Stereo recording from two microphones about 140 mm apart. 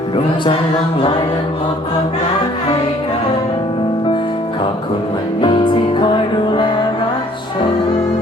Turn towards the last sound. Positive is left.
turn(degrees=35)  # may be behind; listen again after turning